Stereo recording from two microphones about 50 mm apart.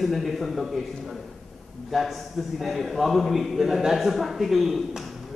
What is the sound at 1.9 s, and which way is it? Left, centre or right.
A man's voice, centre.